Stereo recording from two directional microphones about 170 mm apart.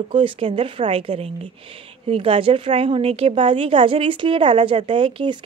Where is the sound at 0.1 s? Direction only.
30° right (ahead or behind).